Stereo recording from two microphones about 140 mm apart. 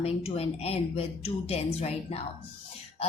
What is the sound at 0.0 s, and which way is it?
A woman's voice, 45° left (ahead or behind).